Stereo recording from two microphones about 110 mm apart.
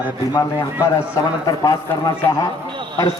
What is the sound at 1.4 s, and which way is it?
Speech, 35° left (ahead or behind).